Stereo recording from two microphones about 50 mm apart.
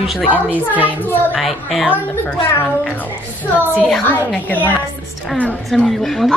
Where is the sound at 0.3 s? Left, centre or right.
Right.